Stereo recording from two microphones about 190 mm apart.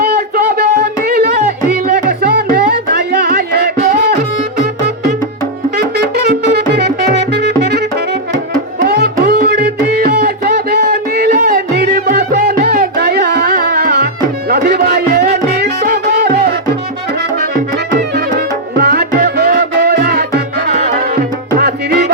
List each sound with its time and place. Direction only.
0.0 s a sound: 55° right (ahead or behind)
2.0 s music: 55° right (ahead or behind)
5.7 s music: 60° right (ahead or behind)
14.5 s a sound: 60° right (ahead or behind)
15.4 s music: 60° right (ahead or behind)
18.3 s music: 55° right (ahead or behind)